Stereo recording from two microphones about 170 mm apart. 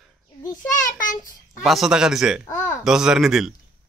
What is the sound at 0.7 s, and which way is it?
Speech, 50° left (ahead or behind).